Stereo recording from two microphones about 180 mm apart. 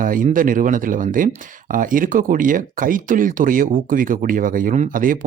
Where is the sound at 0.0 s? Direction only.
50° right (ahead or behind).